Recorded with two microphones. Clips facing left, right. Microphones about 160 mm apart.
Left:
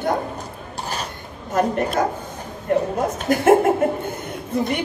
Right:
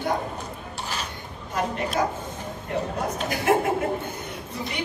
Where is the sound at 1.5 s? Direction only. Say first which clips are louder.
Left 7 dB; 50° left (ahead or behind).